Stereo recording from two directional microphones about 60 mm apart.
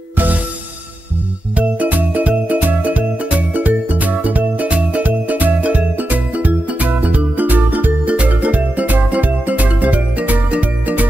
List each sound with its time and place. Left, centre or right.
1.6 s music: right